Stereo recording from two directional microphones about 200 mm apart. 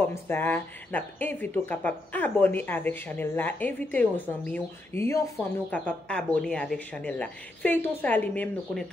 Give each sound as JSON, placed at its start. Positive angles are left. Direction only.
{"t": 0.1, "sound": "a woman's voice", "side_deg": 10}